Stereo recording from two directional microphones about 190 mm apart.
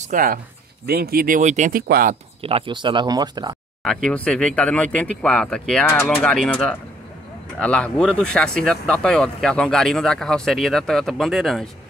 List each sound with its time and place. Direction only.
0.0 s speech: 45° right (ahead or behind)
2.4 s speech: 30° right (ahead or behind)
3.8 s speech: 5° left (ahead or behind)